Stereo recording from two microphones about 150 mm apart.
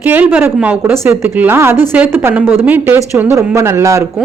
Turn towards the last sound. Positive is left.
turn(degrees=-20)  # may be behind; listen again after turning